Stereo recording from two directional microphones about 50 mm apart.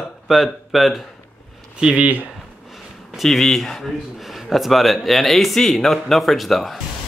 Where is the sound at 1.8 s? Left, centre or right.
Centre.